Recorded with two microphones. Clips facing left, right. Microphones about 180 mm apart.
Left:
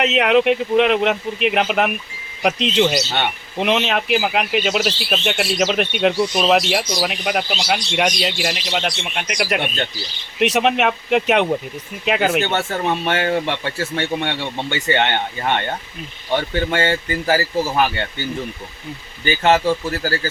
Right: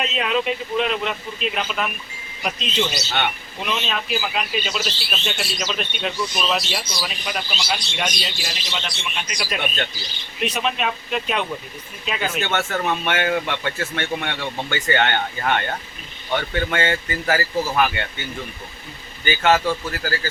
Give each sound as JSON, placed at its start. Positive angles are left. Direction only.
{"t": 0.0, "sound": "speech", "side_deg": 70}
{"t": 10.4, "sound": "speech", "side_deg": 75}
{"t": 12.5, "sound": "speech", "side_deg": 30}
{"t": 19.2, "sound": "speech", "side_deg": 30}